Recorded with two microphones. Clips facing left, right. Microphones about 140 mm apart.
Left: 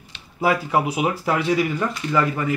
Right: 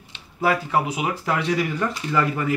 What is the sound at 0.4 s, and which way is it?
Speech, 15° left (ahead or behind).